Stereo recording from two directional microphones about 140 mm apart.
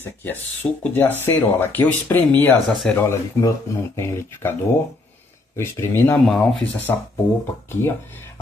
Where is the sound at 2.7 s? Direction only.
5° left (ahead or behind).